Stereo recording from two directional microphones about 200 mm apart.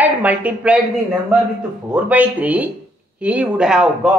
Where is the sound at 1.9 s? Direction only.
5° right (ahead or behind).